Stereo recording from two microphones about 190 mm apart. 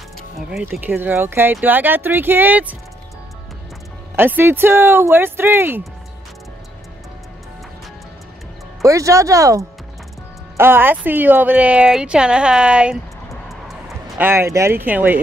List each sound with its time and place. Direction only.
0.5 s speech: 5° right (ahead or behind)
4.1 s speech: 10° right (ahead or behind)
8.8 s speech: 15° right (ahead or behind)
13.5 s vehicle: centre (ahead or behind)
14.2 s speech: 15° right (ahead or behind)